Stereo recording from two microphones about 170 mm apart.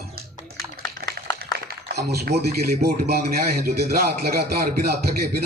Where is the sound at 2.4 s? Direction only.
70° right (ahead or behind).